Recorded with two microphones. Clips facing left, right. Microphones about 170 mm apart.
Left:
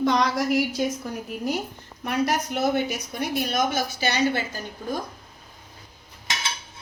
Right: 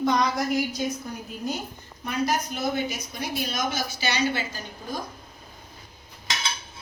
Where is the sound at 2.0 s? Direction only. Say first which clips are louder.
Left 2 dB; 70° left (ahead or behind); by 4.9 s 50° left (ahead or behind).